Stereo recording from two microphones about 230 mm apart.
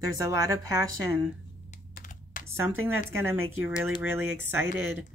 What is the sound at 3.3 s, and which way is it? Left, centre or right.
Speech, right.